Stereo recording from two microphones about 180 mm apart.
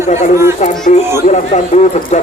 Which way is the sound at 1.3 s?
40° left (ahead or behind).